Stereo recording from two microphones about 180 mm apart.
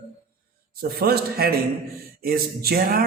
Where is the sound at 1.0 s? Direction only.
60° right (ahead or behind).